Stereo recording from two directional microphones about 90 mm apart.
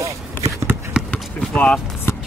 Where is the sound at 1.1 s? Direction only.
15° left (ahead or behind).